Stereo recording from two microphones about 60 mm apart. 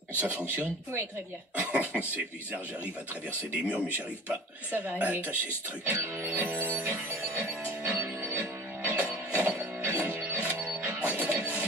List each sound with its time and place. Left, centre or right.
0.2 s speech: right
1.6 s cough: right
3.6 s speech: centre
6.6 s music: right
10.5 s music: right
10.8 s music: right